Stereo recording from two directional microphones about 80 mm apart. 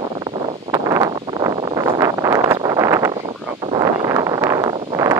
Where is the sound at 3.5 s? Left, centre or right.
Right.